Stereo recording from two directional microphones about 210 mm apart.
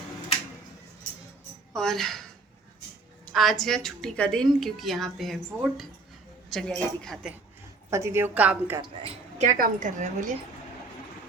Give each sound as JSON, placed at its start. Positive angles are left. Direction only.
{"t": 1.7, "sound": "a woman's voice", "side_deg": 0}
{"t": 3.3, "sound": "a woman's voice", "side_deg": 0}
{"t": 7.9, "sound": "a woman's voice", "side_deg": -15}
{"t": 8.8, "sound": "speech", "side_deg": -25}
{"t": 9.6, "sound": "a woman's voice", "side_deg": -35}